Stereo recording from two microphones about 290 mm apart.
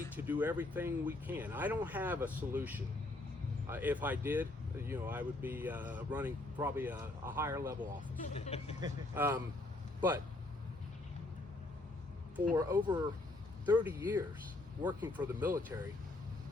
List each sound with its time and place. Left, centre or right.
0.2 s speech: centre
8.3 s speech: left
8.8 s speech: centre
12.5 s speech: centre